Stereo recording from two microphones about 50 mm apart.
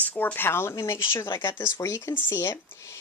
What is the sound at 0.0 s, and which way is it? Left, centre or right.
Speech, left.